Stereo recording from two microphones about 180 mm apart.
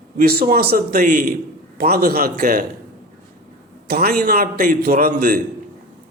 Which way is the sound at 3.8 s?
55° right (ahead or behind).